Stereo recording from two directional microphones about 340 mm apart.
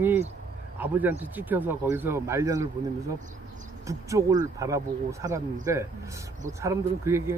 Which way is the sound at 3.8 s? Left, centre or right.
Centre.